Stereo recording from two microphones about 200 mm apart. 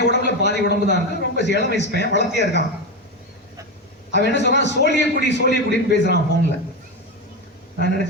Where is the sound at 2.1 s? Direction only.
60° left (ahead or behind).